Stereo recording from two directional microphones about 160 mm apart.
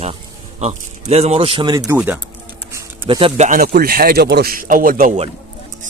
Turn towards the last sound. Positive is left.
turn(degrees=-60)  # may be behind; listen again after turning